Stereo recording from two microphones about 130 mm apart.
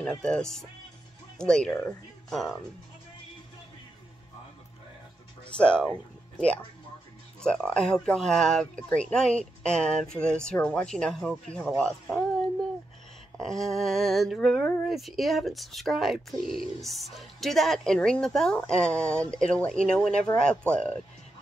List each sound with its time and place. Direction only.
0.0 s speech: 5° left (ahead or behind)
5.6 s speech: 10° left (ahead or behind)
7.4 s speech: 5° left (ahead or behind)